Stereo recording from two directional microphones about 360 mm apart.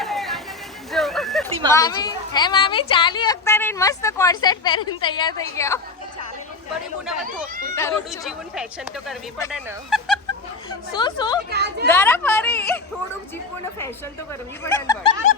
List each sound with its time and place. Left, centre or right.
0.0 s a sound: centre
1.7 s a woman's voice: centre
7.8 s speech: centre
10.9 s a woman's voice: centre
11.5 s speech: right
11.9 s a woman's voice: centre
14.6 s a woman's voice: centre